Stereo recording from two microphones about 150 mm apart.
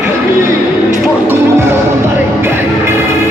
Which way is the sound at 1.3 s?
15° right (ahead or behind).